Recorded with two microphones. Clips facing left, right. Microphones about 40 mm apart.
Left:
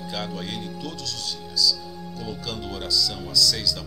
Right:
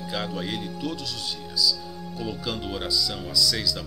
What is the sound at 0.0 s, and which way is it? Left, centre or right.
Speech, centre.